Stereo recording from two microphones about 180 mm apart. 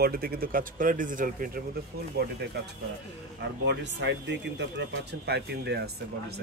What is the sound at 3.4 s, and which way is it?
Speech, 75° right (ahead or behind).